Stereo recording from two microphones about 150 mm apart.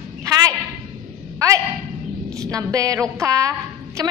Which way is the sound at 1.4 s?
20° right (ahead or behind).